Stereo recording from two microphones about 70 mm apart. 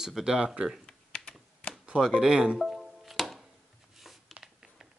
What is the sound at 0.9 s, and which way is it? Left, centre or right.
Typing, centre.